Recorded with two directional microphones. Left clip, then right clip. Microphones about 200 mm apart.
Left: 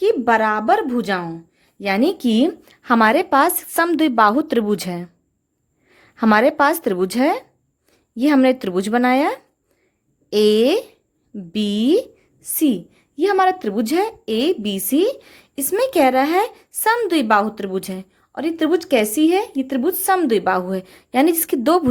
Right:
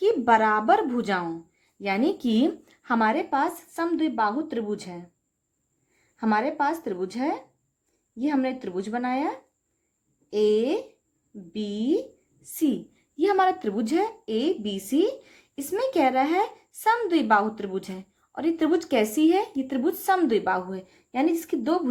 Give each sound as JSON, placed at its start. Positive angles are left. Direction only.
{"t": 0.0, "sound": "a woman's voice", "side_deg": 35}